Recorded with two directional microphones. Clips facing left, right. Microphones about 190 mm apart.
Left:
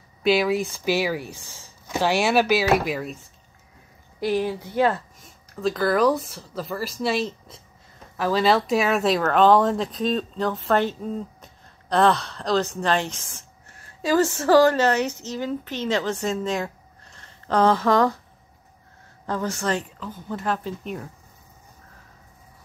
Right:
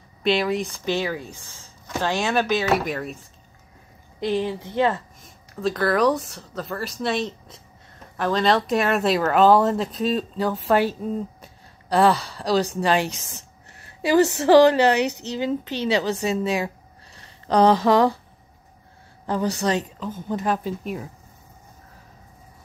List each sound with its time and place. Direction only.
0.2 s speech: 5° left (ahead or behind)
4.2 s speech: 10° left (ahead or behind); by 15.0 s 15° right (ahead or behind)
15.0 s speech: 65° right (ahead or behind)
15.3 s speech: 15° right (ahead or behind)
19.2 s speech: 15° right (ahead or behind)